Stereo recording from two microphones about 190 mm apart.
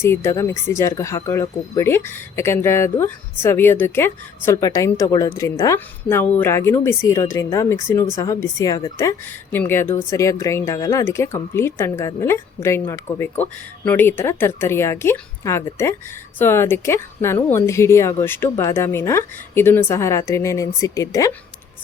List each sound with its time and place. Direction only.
0.0 s a woman's voice: 15° left (ahead or behind)